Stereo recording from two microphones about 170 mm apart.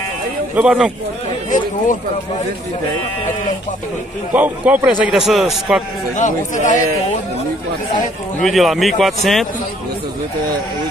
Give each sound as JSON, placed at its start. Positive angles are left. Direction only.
{"t": 0.6, "sound": "a man's voice", "side_deg": -5}
{"t": 4.3, "sound": "a man's voice", "side_deg": -10}
{"t": 6.1, "sound": "speech", "side_deg": 50}
{"t": 8.4, "sound": "a man's voice", "side_deg": 0}